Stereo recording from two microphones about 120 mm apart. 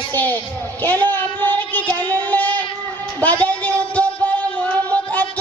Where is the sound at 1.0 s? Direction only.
15° left (ahead or behind).